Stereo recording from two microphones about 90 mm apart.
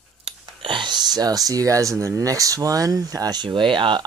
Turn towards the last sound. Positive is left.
turn(degrees=-65)  # may be behind; listen again after turning